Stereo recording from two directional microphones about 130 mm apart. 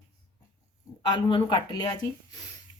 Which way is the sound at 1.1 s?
35° left (ahead or behind).